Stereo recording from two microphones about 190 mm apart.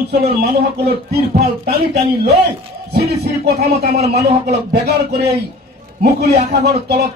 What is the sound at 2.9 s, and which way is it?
A man's voice, 55° right (ahead or behind).